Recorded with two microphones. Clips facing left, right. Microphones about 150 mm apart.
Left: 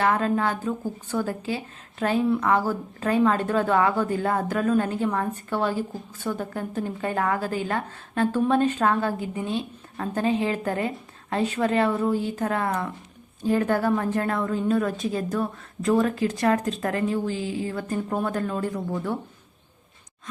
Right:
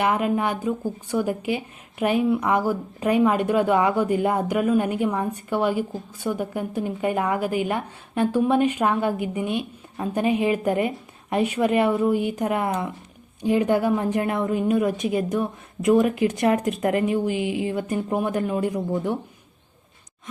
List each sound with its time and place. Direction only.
0.0 s speech: 15° right (ahead or behind)